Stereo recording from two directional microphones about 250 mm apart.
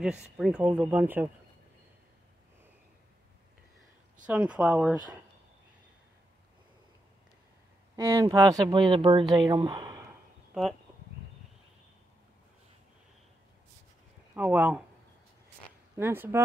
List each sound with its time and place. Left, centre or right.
0.0 s speech: centre
4.3 s speech: centre
7.9 s speech: centre
14.3 s speech: centre
16.0 s speech: centre